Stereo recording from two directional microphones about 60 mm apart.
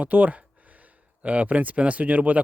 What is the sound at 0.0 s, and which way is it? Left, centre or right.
Speech, right.